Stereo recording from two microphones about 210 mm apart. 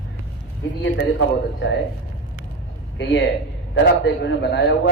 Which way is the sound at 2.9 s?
60° left (ahead or behind).